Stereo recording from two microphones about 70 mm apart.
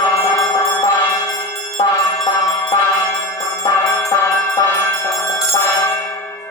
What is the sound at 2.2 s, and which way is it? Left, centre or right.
Music, left.